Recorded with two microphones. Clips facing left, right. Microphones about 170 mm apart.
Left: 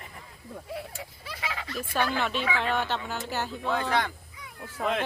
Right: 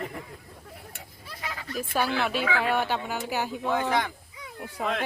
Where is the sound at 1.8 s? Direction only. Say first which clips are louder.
Right 2 dB; 10° right (ahead or behind).